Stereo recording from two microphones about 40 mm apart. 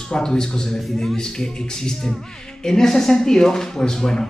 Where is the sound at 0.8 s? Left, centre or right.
Centre.